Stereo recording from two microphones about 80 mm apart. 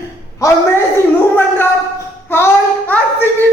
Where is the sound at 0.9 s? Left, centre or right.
Left.